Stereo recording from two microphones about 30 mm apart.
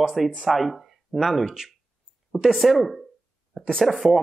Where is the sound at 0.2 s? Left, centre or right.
Centre.